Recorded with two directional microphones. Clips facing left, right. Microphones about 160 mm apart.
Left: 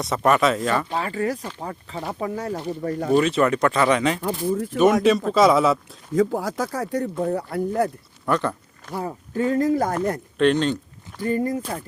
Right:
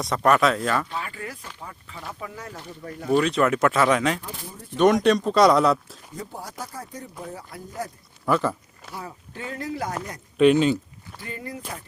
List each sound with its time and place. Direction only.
0.0 s speech: centre (ahead or behind)
0.9 s speech: 35° left (ahead or behind)
3.1 s speech: centre (ahead or behind)
4.2 s speech: 90° left
4.8 s speech: 5° left (ahead or behind)
6.1 s speech: 90° left; by 7.9 s 60° left (ahead or behind)
8.3 s speech: 5° right (ahead or behind)
9.0 s speech: 40° left (ahead or behind)
10.3 s speech: 5° right (ahead or behind)
11.2 s speech: 45° left (ahead or behind)